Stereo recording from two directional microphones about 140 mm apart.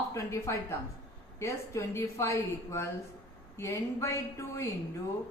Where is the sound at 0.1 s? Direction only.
20° left (ahead or behind).